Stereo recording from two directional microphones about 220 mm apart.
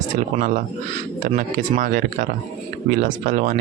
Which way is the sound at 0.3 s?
35° right (ahead or behind).